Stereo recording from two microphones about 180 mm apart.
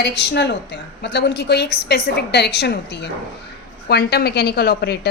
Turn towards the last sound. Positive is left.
turn(degrees=65)  # may be behind; listen again after turning